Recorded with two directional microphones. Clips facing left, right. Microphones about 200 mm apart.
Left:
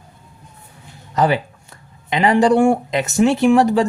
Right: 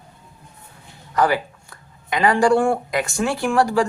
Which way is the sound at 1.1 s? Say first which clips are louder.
Left 2 dB; 20° left (ahead or behind).